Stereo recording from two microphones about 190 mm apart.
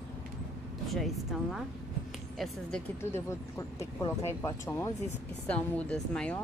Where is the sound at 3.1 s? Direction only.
15° left (ahead or behind).